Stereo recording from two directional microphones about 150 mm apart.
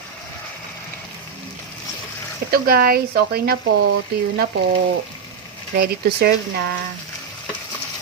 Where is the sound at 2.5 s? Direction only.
90° right.